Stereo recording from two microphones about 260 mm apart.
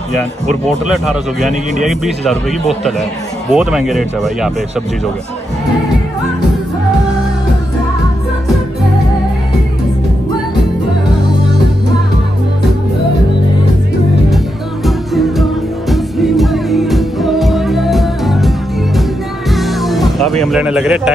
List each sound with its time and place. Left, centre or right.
0.7 s speech: centre
3.5 s speech: centre
14.9 s music: centre
19.5 s music: centre